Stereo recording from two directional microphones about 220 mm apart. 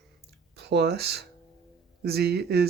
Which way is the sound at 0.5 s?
50° right (ahead or behind).